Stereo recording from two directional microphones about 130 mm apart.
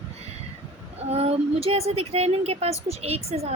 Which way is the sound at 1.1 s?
50° right (ahead or behind).